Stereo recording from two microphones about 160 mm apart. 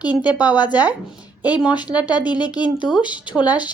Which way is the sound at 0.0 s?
10° right (ahead or behind).